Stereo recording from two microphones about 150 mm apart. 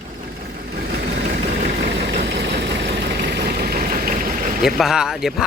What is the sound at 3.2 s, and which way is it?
Vehicle, 90° right.